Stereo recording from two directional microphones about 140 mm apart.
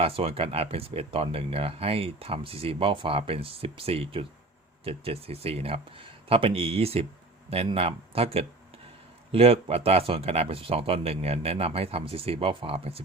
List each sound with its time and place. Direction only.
0.0 s speech: 45° right (ahead or behind)